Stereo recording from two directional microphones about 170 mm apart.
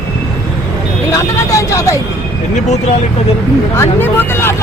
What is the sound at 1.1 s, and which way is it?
Speech, 20° left (ahead or behind).